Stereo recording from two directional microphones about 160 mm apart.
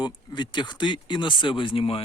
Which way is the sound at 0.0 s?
30° left (ahead or behind).